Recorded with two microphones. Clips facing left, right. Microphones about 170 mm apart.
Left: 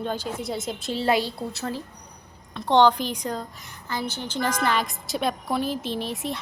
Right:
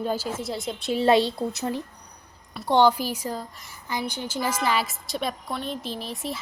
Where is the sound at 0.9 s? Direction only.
25° right (ahead or behind).